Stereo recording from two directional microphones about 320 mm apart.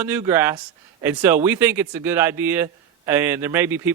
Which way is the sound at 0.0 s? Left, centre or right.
Centre.